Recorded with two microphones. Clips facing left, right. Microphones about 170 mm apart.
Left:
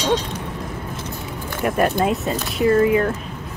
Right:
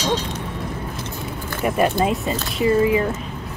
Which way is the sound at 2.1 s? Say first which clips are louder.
Left 1 dB; centre (ahead or behind).